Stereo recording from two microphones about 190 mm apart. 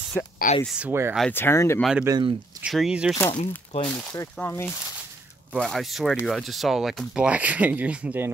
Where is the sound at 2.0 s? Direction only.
20° right (ahead or behind).